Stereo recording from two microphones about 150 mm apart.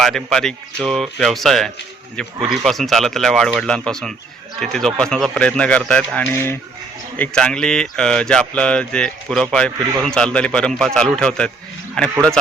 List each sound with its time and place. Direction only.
0.0 s speech: centre (ahead or behind)